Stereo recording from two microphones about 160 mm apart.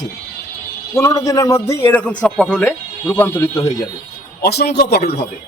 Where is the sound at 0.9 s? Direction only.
20° left (ahead or behind).